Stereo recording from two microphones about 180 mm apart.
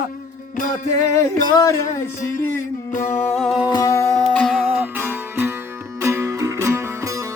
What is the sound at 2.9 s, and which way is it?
Music, 45° left (ahead or behind).